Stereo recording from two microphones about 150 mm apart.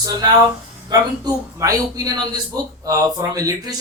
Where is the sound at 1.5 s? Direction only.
25° right (ahead or behind).